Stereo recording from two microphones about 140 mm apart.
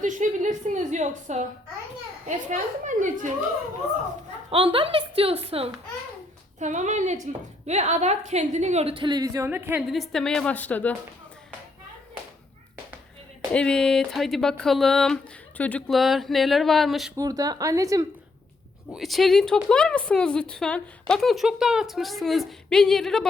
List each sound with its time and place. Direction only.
0.0 s a woman's voice: 65° right (ahead or behind)
4.5 s a woman's voice: 40° right (ahead or behind)
6.6 s a woman's voice: 60° right (ahead or behind); by 9.8 s 15° right (ahead or behind)
9.9 s a woman's voice: centre (ahead or behind)
13.5 s a woman's voice: 5° left (ahead or behind)
15.9 s a woman's voice: centre (ahead or behind)
17.2 s speech: 25° right (ahead or behind)
18.9 s a woman's voice: centre (ahead or behind)